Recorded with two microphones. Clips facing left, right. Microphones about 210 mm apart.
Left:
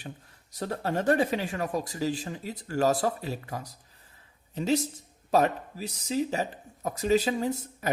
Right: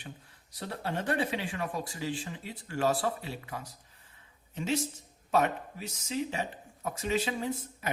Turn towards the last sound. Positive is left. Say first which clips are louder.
# left 5 dB
turn(degrees=40)  # may be behind; listen again after turning